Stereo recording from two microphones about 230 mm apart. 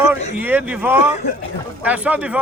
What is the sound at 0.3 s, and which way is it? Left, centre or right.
A man's voice, centre.